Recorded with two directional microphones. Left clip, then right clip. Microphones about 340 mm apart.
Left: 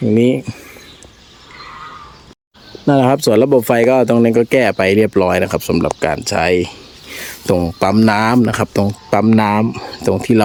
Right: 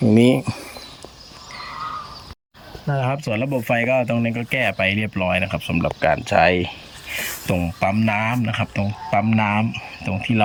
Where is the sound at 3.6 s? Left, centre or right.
Centre.